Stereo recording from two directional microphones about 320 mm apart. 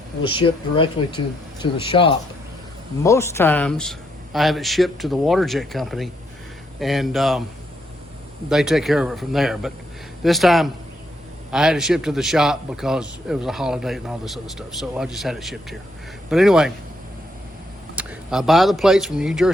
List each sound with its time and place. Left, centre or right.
0.2 s a man's voice: centre
8.4 s a man's voice: centre
17.9 s speech: centre